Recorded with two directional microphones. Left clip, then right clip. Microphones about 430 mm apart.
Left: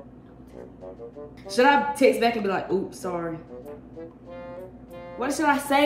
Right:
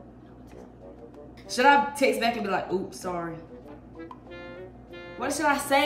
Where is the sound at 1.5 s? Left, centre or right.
Centre.